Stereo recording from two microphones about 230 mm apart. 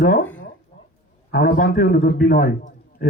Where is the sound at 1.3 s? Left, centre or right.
Left.